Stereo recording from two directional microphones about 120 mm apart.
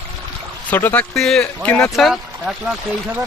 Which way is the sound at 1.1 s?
5° left (ahead or behind).